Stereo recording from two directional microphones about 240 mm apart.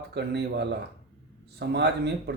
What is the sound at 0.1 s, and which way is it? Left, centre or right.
A man's voice, right.